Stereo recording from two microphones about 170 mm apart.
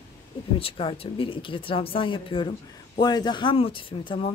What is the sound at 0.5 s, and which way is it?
A woman's voice, 30° left (ahead or behind).